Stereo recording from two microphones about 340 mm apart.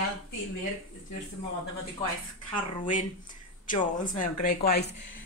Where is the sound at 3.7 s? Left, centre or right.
Left.